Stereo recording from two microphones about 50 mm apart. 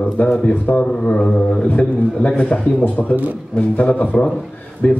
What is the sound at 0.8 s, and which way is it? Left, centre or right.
Mantra, centre.